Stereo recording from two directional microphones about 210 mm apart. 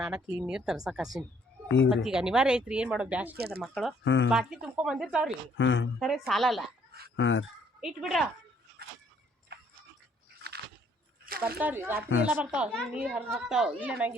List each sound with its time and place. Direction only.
0.0 s speech: 5° right (ahead or behind)
3.3 s speech: 50° right (ahead or behind)
3.6 s speech: centre (ahead or behind)
4.0 s a woman's voice: 60° left (ahead or behind)
4.3 s speech: 5° right (ahead or behind)
5.5 s a woman's voice: 60° left (ahead or behind)
6.0 s speech: centre (ahead or behind)
7.2 s a woman's voice: 65° left (ahead or behind)
7.8 s speech: centre (ahead or behind)
9.5 s tick-tock: 50° right (ahead or behind)
11.3 s a sound: 45° right (ahead or behind)
11.6 s speech: 10° right (ahead or behind)